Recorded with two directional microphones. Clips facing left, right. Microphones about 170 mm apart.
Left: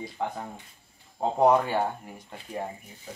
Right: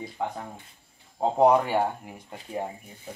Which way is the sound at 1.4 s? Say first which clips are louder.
Right 1 dB; 10° right (ahead or behind).